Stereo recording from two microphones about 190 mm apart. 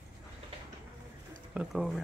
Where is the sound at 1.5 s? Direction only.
5° right (ahead or behind).